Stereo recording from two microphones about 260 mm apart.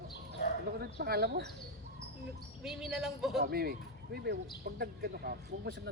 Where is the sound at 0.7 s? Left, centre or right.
Right.